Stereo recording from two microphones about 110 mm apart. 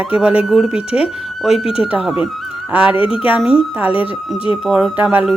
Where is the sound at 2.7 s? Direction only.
10° right (ahead or behind).